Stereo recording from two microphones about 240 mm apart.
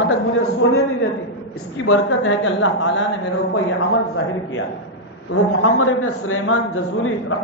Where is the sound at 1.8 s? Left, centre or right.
Left.